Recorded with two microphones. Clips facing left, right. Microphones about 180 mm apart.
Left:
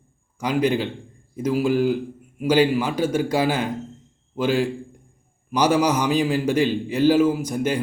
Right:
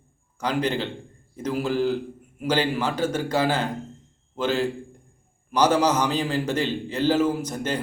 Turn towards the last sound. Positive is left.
turn(degrees=10)  # may be behind; listen again after turning